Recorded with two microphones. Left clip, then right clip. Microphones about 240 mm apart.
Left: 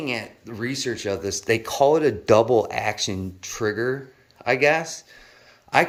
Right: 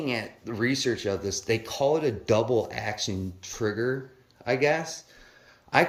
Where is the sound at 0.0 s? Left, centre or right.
Centre.